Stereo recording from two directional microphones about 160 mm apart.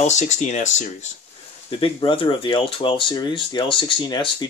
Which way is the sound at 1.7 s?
30° left (ahead or behind).